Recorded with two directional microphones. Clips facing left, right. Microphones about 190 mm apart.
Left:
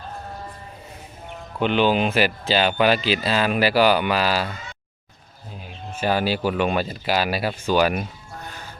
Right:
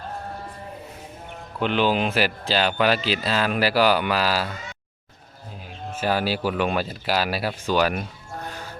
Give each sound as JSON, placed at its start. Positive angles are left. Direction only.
{"t": 1.6, "sound": "speech", "side_deg": 0}
{"t": 6.0, "sound": "speech", "side_deg": -5}